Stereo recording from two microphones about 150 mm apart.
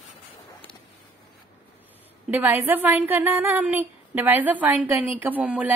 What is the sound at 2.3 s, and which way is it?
A woman's voice, 10° right (ahead or behind).